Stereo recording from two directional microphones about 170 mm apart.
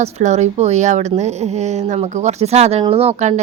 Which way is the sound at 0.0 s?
40° right (ahead or behind).